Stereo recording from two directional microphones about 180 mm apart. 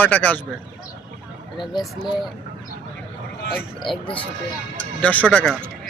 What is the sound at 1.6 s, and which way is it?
Speech, 25° left (ahead or behind).